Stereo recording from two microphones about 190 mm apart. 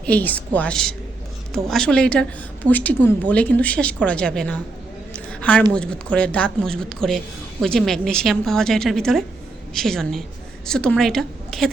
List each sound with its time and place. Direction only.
0.0 s a woman's voice: 10° left (ahead or behind)
5.1 s a sound: 5° left (ahead or behind)
5.7 s a woman's voice: 5° left (ahead or behind)